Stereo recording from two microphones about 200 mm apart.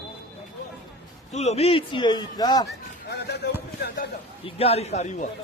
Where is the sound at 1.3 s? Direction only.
35° left (ahead or behind).